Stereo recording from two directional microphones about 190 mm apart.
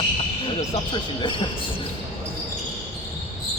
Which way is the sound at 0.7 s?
25° left (ahead or behind).